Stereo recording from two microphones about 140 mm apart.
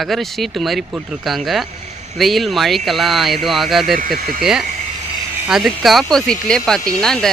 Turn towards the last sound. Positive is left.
turn(degrees=5)  # may be behind; listen again after turning